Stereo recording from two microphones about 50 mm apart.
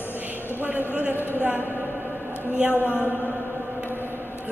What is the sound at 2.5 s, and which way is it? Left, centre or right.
Speech, right.